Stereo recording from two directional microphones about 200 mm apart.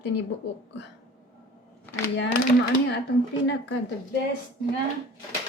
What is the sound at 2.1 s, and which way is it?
Speech, 60° left (ahead or behind).